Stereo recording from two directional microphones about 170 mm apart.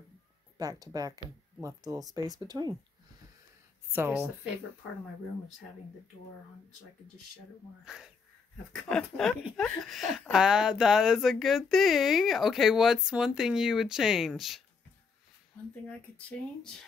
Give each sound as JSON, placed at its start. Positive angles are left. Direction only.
{"t": 0.6, "sound": "speech", "side_deg": -20}
{"t": 3.9, "sound": "speech", "side_deg": -10}
{"t": 7.8, "sound": "speech", "side_deg": -5}
{"t": 15.9, "sound": "speech", "side_deg": 10}